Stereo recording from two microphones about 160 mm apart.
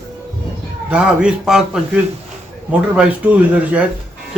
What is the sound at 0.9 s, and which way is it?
Speech, 5° right (ahead or behind).